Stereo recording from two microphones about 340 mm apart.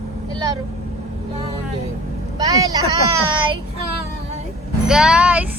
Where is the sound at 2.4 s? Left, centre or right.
Centre.